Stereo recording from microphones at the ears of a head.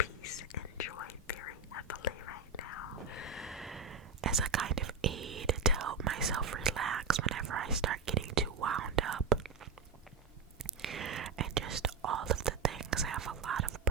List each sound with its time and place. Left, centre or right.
0.0 s whispering: left
3.8 s whispering: right
10.6 s whispering: right